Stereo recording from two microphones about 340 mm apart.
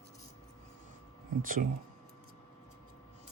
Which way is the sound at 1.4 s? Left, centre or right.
Right.